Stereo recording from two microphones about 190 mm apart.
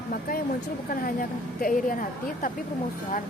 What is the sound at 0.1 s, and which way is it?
Speech, 50° left (ahead or behind).